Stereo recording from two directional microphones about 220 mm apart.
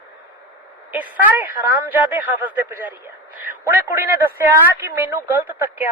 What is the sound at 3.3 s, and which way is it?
A woman's voice, 5° right (ahead or behind).